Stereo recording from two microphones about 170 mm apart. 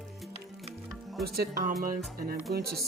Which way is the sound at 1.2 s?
65° right (ahead or behind).